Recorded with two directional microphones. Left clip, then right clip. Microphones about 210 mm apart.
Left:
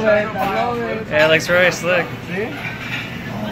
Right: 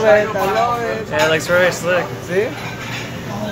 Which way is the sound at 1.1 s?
5° left (ahead or behind).